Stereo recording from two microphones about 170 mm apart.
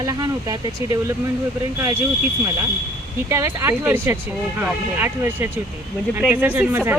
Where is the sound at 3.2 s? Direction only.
15° right (ahead or behind).